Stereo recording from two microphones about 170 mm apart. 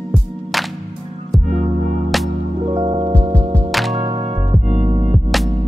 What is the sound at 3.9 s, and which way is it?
Music, 35° right (ahead or behind).